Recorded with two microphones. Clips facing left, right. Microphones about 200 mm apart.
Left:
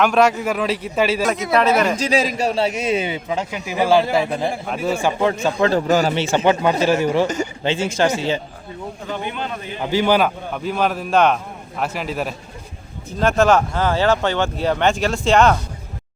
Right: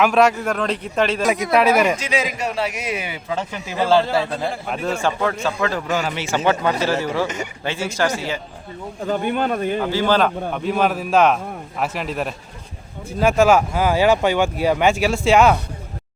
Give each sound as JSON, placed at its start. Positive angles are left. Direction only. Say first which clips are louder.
{"t": 0.0, "sound": "a man's voice", "louder": "even", "side_deg": 0}
{"t": 1.5, "sound": "speech", "louder": "even", "side_deg": -10}
{"t": 2.0, "sound": "a man's voice", "louder": "left 4 dB", "side_deg": 35}
{"t": 3.3, "sound": "speech", "louder": "even", "side_deg": 10}
{"t": 4.6, "sound": "a man's voice", "louder": "left 2 dB", "side_deg": 5}
{"t": 5.5, "sound": "a man's voice", "louder": "left 5 dB", "side_deg": 25}
{"t": 9.0, "sound": "speech", "louder": "right 7 dB", "side_deg": -45}
{"t": 9.8, "sound": "a man's voice", "louder": "left 4 dB", "side_deg": 15}